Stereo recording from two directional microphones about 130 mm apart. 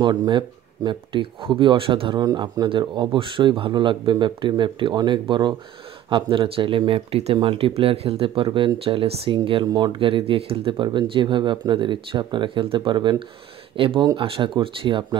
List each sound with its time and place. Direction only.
0.0 s speech: 35° right (ahead or behind)
9.7 s speech: 30° right (ahead or behind)
9.9 s speech: 45° right (ahead or behind)